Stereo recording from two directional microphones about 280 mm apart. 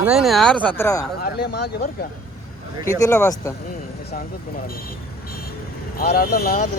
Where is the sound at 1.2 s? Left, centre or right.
Left.